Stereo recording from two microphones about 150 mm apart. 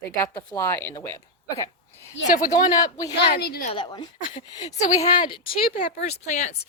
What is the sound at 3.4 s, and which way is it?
Speech, 90° left.